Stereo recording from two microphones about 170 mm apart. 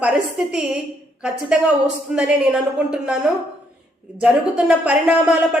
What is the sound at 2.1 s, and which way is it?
Speech, 5° right (ahead or behind).